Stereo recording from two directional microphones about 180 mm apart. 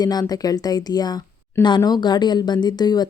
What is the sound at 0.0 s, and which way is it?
A woman's voice, 20° left (ahead or behind).